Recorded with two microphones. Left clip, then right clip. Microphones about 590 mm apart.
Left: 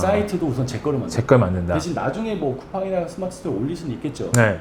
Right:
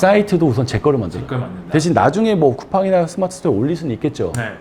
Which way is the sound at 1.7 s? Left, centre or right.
Right.